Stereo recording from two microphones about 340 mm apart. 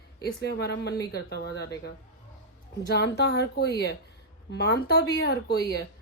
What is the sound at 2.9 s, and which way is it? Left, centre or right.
Speech, left.